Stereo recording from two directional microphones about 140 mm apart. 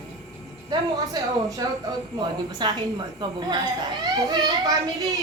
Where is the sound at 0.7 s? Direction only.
25° right (ahead or behind).